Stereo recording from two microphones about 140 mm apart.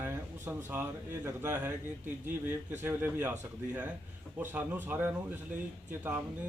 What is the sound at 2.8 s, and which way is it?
Speech, 15° right (ahead or behind).